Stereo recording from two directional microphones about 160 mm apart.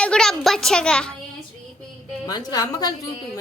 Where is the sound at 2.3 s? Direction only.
25° left (ahead or behind).